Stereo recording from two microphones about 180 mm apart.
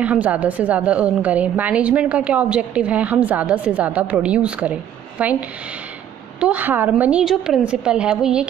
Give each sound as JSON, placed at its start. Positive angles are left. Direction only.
{"t": 0.0, "sound": "a woman's voice", "side_deg": -10}
{"t": 6.4, "sound": "a woman's voice", "side_deg": -10}